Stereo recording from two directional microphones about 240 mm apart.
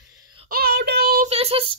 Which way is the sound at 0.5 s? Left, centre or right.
Right.